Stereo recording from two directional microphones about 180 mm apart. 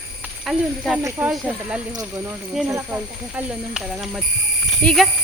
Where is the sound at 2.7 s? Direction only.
15° right (ahead or behind).